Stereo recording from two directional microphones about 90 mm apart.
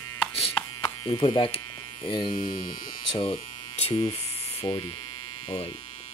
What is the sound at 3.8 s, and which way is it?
Speech, 90° left.